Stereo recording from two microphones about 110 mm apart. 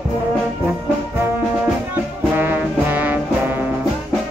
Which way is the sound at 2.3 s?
15° right (ahead or behind).